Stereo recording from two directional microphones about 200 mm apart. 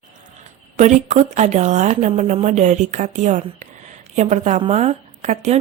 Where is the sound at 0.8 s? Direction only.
35° right (ahead or behind).